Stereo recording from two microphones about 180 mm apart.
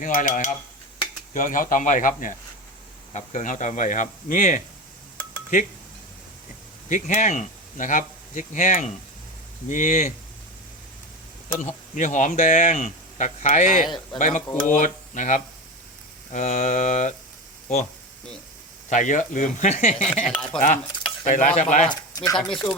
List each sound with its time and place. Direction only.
0.0 s speech: 45° left (ahead or behind)
6.8 s speech: 45° left (ahead or behind)
11.4 s speech: 45° left (ahead or behind)
18.9 s speech: 45° left (ahead or behind)
20.2 s speech: 5° left (ahead or behind)
21.2 s speech: 45° left (ahead or behind)
21.8 s speech: 20° left (ahead or behind)
22.4 s speech: 5° left (ahead or behind)